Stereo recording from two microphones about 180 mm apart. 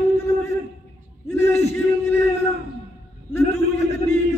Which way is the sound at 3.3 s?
15° left (ahead or behind).